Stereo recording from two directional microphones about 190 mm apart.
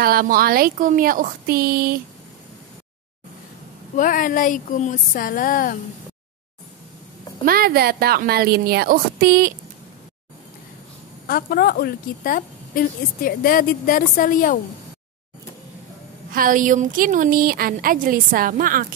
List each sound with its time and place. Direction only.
0.0 s a woman's voice: 50° right (ahead or behind)
3.9 s a woman's voice: 45° left (ahead or behind)
7.4 s a woman's voice: 50° right (ahead or behind)
11.2 s a woman's voice: 50° left (ahead or behind)
16.3 s a woman's voice: 45° right (ahead or behind)